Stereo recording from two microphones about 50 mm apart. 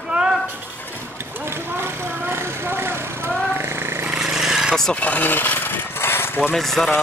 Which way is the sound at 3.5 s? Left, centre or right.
Right.